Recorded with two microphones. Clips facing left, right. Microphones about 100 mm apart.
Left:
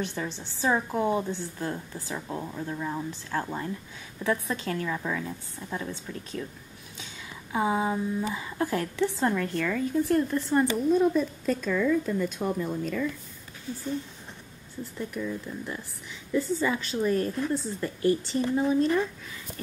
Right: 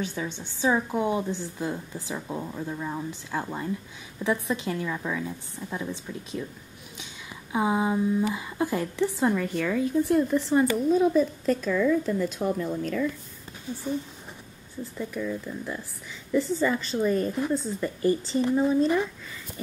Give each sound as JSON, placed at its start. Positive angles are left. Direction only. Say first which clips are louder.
{"t": 0.0, "sound": "a woman's voice", "louder": "right 1 dB", "side_deg": -10}
{"t": 7.5, "sound": "a woman's voice", "louder": "right 2 dB", "side_deg": -10}
{"t": 13.7, "sound": "a woman's voice", "louder": "right 1 dB", "side_deg": -15}
{"t": 15.0, "sound": "a woman's voice", "louder": "right 2 dB", "side_deg": 5}